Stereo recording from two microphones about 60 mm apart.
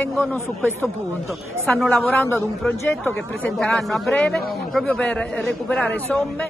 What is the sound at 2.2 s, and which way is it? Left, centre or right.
Speech, left.